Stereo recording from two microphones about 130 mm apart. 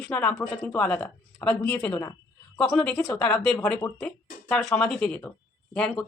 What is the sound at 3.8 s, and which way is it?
Speech, 25° left (ahead or behind).